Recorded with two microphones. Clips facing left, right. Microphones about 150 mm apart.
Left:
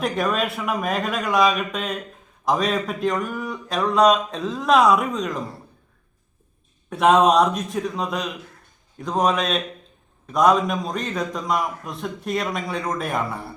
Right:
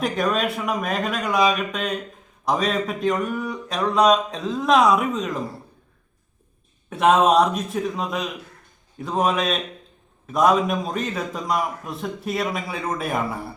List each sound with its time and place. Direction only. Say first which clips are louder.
0.0 s a man's voice: even; centre (ahead or behind)
6.9 s a man's voice: even; centre (ahead or behind)